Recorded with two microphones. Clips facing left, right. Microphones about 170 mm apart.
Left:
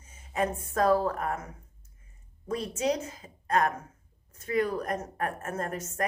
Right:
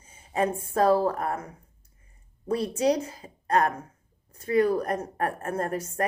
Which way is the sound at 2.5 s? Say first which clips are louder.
Right 5 dB; 35° right (ahead or behind).